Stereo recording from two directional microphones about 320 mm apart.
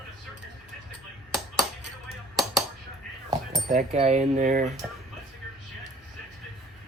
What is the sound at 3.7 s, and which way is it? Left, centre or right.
Speech, centre.